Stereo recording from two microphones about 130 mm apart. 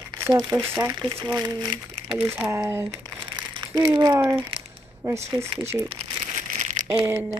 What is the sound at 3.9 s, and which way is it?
Speech, 35° right (ahead or behind).